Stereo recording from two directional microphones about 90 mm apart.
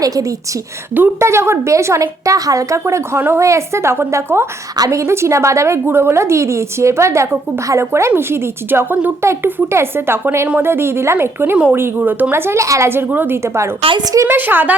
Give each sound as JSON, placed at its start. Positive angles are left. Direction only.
{"t": 0.0, "sound": "a woman's voice", "side_deg": -40}
{"t": 12.9, "sound": "a woman's voice", "side_deg": -25}
{"t": 14.0, "sound": "a woman's voice", "side_deg": -45}
{"t": 14.3, "sound": "a woman's voice", "side_deg": -20}